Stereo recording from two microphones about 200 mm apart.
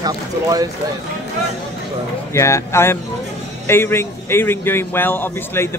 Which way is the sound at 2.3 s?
15° left (ahead or behind).